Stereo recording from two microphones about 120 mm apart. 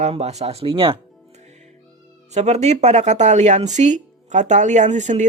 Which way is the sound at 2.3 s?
70° right (ahead or behind).